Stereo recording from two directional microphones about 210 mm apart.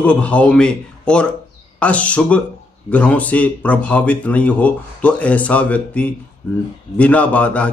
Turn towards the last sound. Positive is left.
turn(degrees=5)  # may be behind; listen again after turning